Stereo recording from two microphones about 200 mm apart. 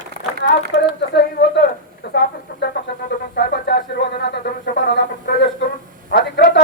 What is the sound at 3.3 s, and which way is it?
Speech, 55° left (ahead or behind).